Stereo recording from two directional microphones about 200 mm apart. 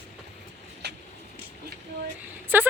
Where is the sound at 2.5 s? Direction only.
10° right (ahead or behind).